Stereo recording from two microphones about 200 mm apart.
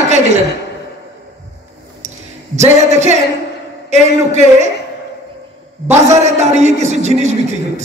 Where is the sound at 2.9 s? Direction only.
35° right (ahead or behind).